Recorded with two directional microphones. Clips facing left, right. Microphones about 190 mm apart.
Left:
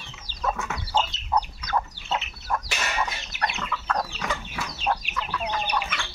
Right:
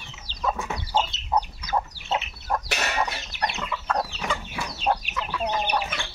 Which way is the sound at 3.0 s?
35° right (ahead or behind).